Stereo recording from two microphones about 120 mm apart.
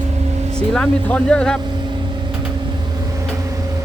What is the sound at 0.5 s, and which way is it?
Speech, 5° left (ahead or behind).